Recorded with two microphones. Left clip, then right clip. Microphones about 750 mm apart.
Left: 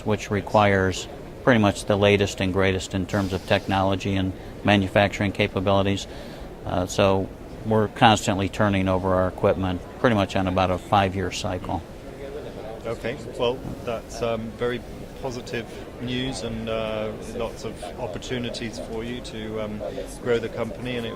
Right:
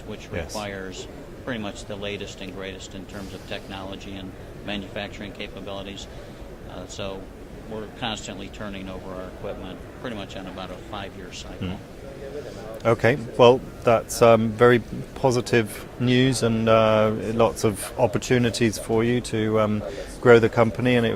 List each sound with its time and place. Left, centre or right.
0.1 s speech: left
12.8 s speech: right